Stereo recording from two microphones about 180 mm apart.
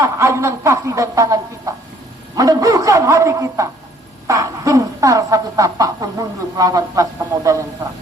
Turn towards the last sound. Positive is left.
turn(degrees=-20)  # may be behind; listen again after turning